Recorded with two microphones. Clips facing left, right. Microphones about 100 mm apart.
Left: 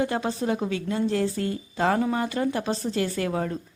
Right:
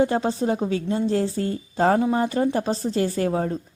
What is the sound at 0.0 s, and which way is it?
A woman's voice, 30° right (ahead or behind).